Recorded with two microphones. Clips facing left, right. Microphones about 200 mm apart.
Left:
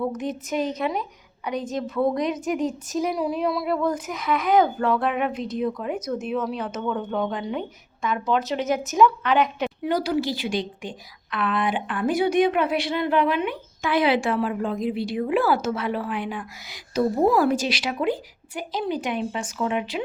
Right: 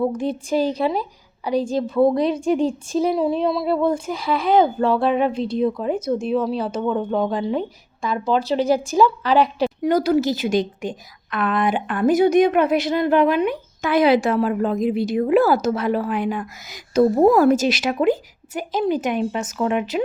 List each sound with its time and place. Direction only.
0.2 s a woman's voice: 30° right (ahead or behind)